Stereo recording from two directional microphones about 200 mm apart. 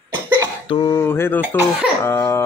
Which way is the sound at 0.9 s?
10° left (ahead or behind).